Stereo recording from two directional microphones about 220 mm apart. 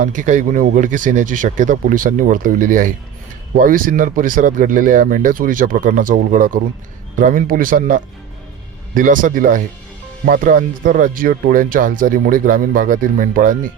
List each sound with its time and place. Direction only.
0.0 s speech: 35° right (ahead or behind)